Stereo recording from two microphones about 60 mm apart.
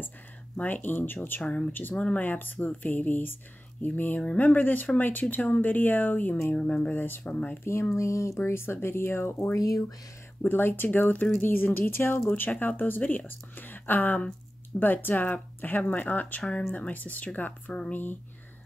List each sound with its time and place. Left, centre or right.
0.6 s speech: left
1.4 s speech: centre
1.7 s speech: left
2.0 s speech: centre
2.2 s speech: left
6.5 s speech: centre
7.9 s speech: left
9.6 s speech: left
10.5 s speech: left